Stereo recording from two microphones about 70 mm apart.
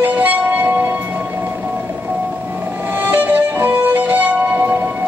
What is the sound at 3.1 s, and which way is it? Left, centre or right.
Music, right.